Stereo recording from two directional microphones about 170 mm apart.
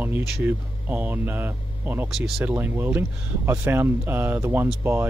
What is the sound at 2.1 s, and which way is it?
Speech, centre (ahead or behind).